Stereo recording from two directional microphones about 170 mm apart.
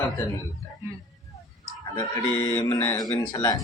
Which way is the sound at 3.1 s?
25° left (ahead or behind).